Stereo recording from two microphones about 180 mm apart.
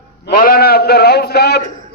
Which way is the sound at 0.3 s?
55° left (ahead or behind).